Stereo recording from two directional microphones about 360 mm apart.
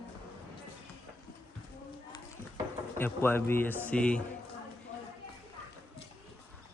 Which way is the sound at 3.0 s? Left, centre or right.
Centre.